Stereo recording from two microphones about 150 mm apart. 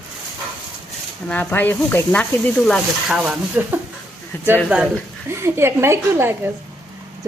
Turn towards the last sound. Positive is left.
turn(degrees=-15)  # may be behind; listen again after turning